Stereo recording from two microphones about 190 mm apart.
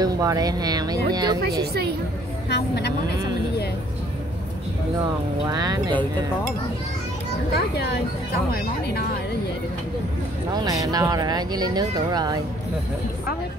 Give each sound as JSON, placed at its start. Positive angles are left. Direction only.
{"t": 0.0, "sound": "speech", "side_deg": -20}
{"t": 1.7, "sound": "a woman's voice", "side_deg": -55}
{"t": 2.5, "sound": "a woman's voice", "side_deg": 60}
{"t": 5.5, "sound": "speech", "side_deg": -20}
{"t": 7.5, "sound": "a woman's voice", "side_deg": 60}
{"t": 10.5, "sound": "speech", "side_deg": -20}